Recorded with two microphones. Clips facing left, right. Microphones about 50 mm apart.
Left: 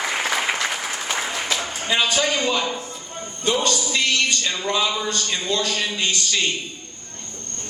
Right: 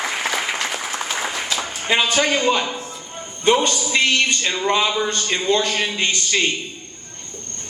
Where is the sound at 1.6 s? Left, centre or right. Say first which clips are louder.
Right 4 dB; right.